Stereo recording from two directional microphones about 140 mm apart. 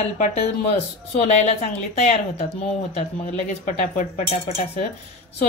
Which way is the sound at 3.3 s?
60° left (ahead or behind).